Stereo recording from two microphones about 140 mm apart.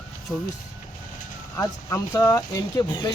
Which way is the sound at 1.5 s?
15° left (ahead or behind).